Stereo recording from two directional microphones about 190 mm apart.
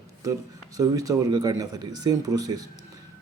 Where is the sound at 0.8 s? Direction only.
20° right (ahead or behind).